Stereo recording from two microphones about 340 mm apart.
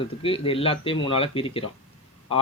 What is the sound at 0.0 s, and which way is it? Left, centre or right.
Speech, centre.